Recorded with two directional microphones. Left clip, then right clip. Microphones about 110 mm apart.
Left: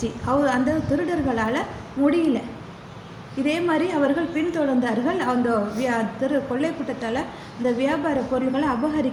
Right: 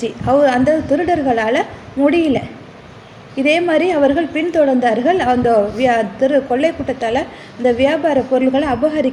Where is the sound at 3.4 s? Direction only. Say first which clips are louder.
Right 9 dB; 40° right (ahead or behind).